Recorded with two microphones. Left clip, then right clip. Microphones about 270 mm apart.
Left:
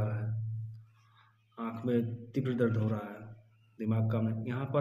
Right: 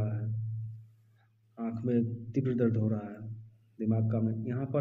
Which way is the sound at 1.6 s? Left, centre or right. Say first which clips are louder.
Right 1 dB; centre.